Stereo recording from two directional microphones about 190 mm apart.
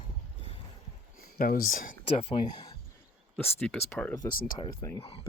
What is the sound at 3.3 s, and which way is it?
Speech, 5° left (ahead or behind).